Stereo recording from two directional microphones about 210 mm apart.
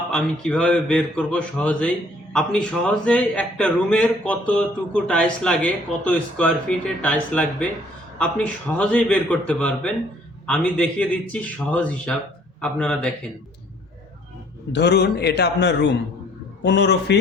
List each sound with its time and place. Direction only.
0.1 s a man's voice: 5° left (ahead or behind)
14.7 s a man's voice: 55° left (ahead or behind)